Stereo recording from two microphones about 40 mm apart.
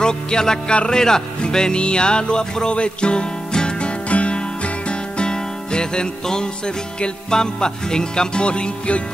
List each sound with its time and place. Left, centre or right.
0.0 s music: centre